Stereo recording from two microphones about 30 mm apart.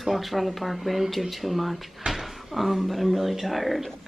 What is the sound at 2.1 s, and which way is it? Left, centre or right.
Cupboard open or close, right.